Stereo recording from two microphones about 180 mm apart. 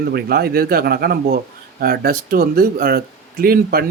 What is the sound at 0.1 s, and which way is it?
Speech, 60° right (ahead or behind).